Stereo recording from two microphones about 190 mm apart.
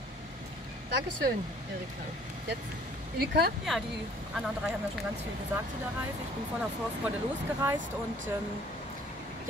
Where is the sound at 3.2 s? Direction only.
55° right (ahead or behind).